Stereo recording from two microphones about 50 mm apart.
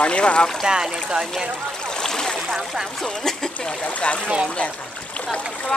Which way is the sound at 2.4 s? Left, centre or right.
Centre.